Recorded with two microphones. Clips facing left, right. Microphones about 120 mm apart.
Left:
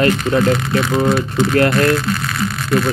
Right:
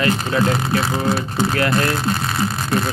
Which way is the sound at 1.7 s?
30° right (ahead or behind).